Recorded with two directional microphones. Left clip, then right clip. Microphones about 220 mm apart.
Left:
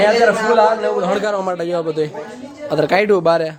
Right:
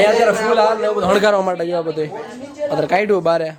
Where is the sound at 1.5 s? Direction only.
5° left (ahead or behind).